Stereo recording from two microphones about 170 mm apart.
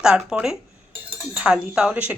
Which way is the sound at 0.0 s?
5° right (ahead or behind).